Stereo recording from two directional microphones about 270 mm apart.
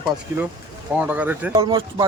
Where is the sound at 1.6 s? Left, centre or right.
Centre.